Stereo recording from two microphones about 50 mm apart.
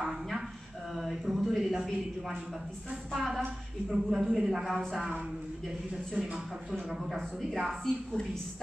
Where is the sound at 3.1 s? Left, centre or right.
Centre.